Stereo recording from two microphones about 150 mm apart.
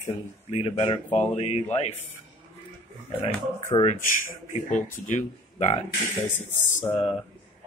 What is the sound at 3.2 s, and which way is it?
Speech, 40° left (ahead or behind).